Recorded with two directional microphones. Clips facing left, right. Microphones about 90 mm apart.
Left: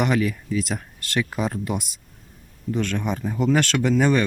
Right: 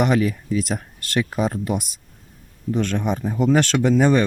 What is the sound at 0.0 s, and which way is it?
Speech, 20° right (ahead or behind).